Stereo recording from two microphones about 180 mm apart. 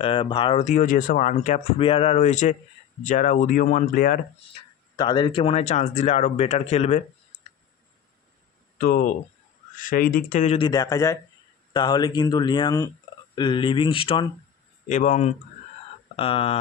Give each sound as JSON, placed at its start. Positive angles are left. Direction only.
{"t": 0.0, "sound": "speech", "side_deg": 30}
{"t": 0.7, "sound": "speech", "side_deg": 45}
{"t": 4.9, "sound": "speech", "side_deg": 25}
{"t": 8.7, "sound": "speech", "side_deg": 50}
{"t": 10.7, "sound": "speech", "side_deg": 20}
{"t": 14.9, "sound": "speech", "side_deg": 40}